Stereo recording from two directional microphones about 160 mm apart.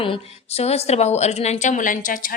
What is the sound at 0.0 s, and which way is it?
A woman's voice, 35° left (ahead or behind).